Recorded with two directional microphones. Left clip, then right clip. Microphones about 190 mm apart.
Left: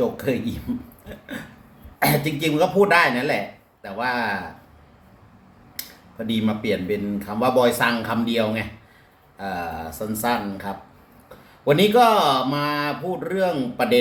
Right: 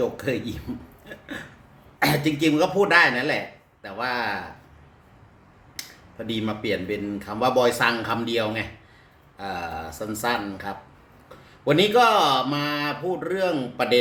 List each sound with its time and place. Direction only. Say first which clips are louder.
2.0 s a man's voice: left 1 dB; 10° right (ahead or behind)
6.2 s a man's voice: left 3 dB; 5° right (ahead or behind)